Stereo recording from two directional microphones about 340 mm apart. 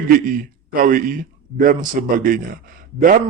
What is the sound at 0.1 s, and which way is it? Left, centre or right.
A man's voice, right.